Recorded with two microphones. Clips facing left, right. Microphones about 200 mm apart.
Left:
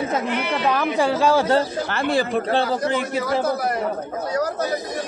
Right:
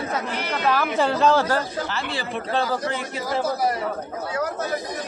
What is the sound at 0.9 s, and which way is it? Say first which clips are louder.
Speech: left 1 dB; 10° left (ahead or behind).